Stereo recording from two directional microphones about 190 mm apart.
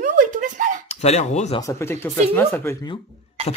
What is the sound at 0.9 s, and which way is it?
Speech, 35° left (ahead or behind).